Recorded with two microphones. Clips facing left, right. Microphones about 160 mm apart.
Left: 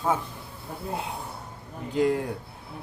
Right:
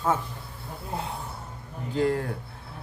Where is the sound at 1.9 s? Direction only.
15° left (ahead or behind).